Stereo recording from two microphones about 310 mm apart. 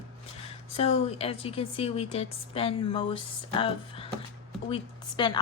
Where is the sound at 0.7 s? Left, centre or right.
Centre.